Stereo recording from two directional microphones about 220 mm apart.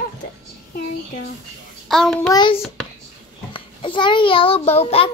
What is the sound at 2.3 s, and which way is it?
A child's voice, 20° left (ahead or behind).